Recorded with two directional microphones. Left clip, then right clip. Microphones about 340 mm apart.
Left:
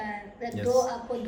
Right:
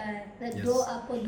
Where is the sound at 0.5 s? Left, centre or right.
Centre.